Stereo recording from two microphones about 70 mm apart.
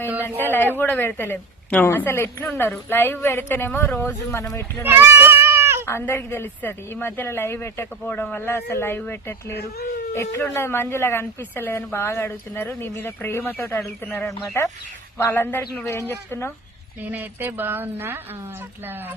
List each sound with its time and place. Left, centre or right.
0.3 s a woman's voice: left
4.8 s goat: right
5.8 s a woman's voice: left
8.0 s speech: left
8.4 s a woman's voice: left
15.3 s a woman's voice: left
17.0 s speech: right